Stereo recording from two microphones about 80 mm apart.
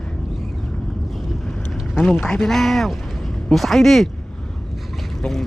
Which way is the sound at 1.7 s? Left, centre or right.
Centre.